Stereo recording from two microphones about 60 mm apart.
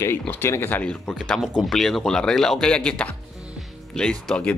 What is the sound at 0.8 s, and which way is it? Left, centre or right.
Speech, centre.